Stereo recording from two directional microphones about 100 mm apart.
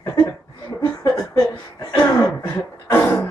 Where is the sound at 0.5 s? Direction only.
35° left (ahead or behind).